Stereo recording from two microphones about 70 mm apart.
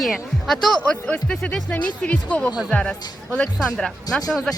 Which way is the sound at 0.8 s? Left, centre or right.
Centre.